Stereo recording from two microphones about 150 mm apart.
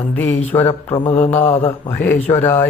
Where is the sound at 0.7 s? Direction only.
40° left (ahead or behind).